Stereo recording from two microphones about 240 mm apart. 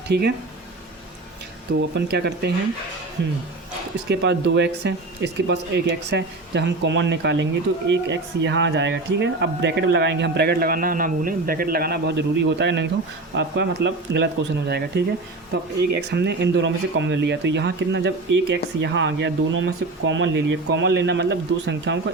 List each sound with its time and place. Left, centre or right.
0.1 s speech: right
1.8 s speech: right
4.1 s speech: right